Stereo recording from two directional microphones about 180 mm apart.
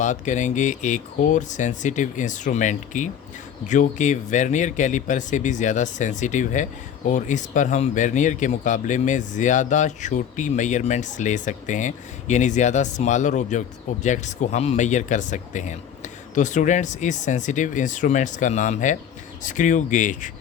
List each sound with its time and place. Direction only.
0.0 s speech: 45° left (ahead or behind)